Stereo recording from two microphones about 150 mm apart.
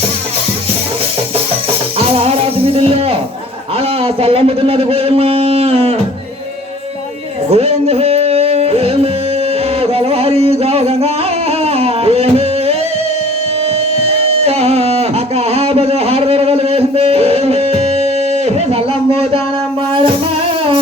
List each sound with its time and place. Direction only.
2.0 s speech: 40° right (ahead or behind)
7.5 s music: 45° right (ahead or behind)
14.4 s music: 45° right (ahead or behind)
18.4 s a sound: 40° right (ahead or behind)